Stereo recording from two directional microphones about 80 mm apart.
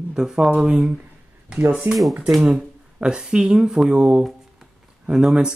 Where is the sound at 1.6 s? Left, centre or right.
Right.